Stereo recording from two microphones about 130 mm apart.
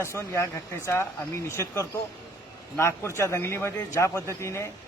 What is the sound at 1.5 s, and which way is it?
Speech, 20° left (ahead or behind).